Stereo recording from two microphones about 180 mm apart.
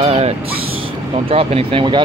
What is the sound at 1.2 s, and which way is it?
Speech, 30° right (ahead or behind).